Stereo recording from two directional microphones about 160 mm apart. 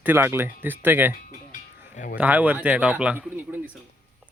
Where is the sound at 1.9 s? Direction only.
60° left (ahead or behind).